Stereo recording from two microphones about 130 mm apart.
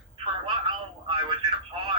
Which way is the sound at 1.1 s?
40° right (ahead or behind).